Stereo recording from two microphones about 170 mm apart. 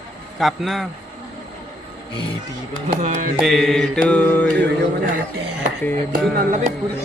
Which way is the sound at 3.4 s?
Centre (ahead or behind).